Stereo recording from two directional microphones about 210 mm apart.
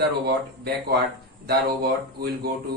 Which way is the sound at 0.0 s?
55° right (ahead or behind).